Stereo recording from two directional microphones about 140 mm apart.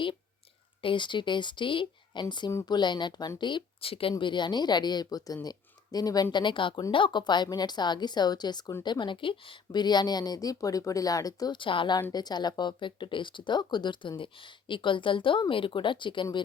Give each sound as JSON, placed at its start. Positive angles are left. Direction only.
{"t": 0.8, "sound": "speech", "side_deg": 35}